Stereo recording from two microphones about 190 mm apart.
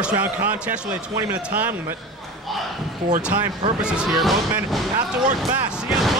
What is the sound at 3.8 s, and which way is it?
A man's voice, 5° right (ahead or behind).